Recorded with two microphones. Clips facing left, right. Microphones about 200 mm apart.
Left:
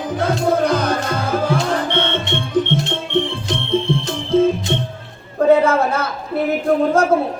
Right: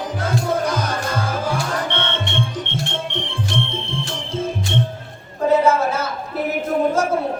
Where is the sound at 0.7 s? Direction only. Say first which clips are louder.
Left 5 dB; 60° left (ahead or behind).